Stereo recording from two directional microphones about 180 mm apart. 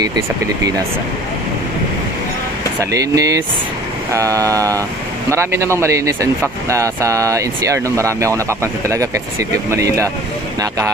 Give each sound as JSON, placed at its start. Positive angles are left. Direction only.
{"t": 2.8, "sound": "speech", "side_deg": -20}
{"t": 4.1, "sound": "vehicle", "side_deg": -20}
{"t": 5.3, "sound": "speech", "side_deg": -15}